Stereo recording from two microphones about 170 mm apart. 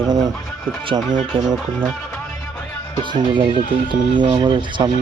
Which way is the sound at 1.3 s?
30° right (ahead or behind).